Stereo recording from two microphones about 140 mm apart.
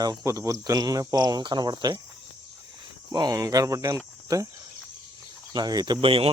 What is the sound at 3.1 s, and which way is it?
Speech, 30° right (ahead or behind).